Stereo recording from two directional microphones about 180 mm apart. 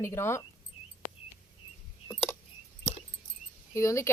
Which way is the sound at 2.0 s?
10° left (ahead or behind).